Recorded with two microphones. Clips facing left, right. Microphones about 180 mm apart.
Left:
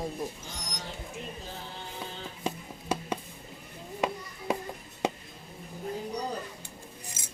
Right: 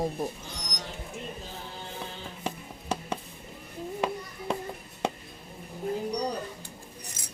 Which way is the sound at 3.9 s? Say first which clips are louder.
Even; 10° left (ahead or behind).